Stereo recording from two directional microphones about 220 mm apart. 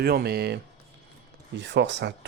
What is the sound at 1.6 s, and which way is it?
Speech, 55° right (ahead or behind).